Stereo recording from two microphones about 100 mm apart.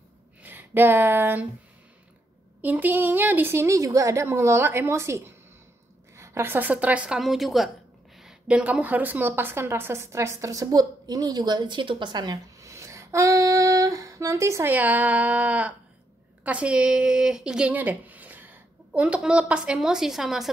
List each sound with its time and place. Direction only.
0.4 s speech: 20° right (ahead or behind)
2.6 s a woman's voice: 15° right (ahead or behind); by 12.4 s 45° right (ahead or behind)
12.5 s female singing: 30° right (ahead or behind)
14.7 s a woman's voice: 15° right (ahead or behind)